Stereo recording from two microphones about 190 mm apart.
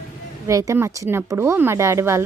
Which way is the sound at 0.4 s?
15° right (ahead or behind).